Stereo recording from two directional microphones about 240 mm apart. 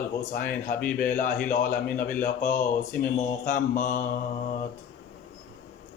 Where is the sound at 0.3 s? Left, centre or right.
Left.